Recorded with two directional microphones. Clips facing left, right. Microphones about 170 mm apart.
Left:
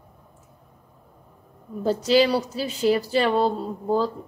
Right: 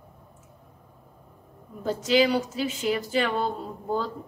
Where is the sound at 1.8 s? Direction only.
35° left (ahead or behind).